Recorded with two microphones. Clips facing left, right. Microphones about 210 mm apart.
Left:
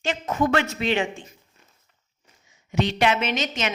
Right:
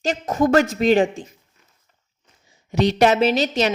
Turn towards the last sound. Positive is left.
turn(degrees=-35)  # may be behind; listen again after turning